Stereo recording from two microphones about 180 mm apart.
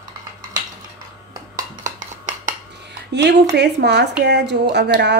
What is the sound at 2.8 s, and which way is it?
Music, 70° right (ahead or behind).